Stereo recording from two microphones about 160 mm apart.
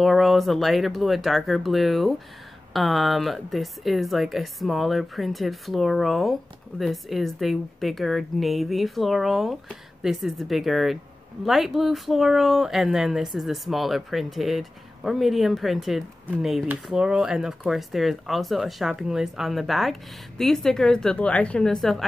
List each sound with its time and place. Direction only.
0.0 s speech: centre (ahead or behind)